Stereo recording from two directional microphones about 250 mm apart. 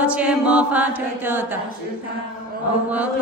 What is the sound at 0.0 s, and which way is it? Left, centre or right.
Mantra, centre.